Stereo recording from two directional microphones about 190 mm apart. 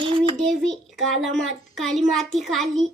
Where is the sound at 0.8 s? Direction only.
Centre (ahead or behind).